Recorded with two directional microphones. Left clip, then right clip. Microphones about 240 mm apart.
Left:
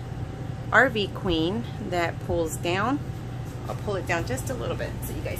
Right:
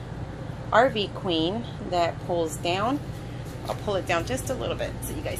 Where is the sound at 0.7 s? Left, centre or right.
Centre.